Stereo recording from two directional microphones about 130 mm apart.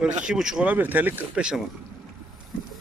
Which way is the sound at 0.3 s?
5° right (ahead or behind).